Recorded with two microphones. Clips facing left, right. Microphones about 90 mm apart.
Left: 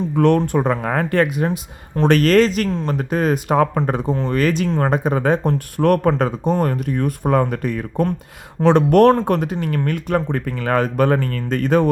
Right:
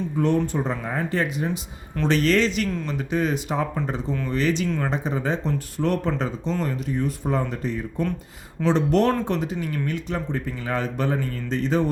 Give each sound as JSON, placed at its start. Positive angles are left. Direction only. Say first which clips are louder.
{"t": 0.2, "sound": "speech", "louder": "left 7 dB", "side_deg": 65}
{"t": 2.0, "sound": "speech", "louder": "left 7 dB", "side_deg": 55}